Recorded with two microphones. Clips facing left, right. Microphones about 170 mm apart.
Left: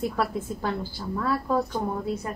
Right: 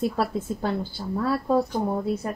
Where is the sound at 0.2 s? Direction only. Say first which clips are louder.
Right 2 dB; 30° right (ahead or behind).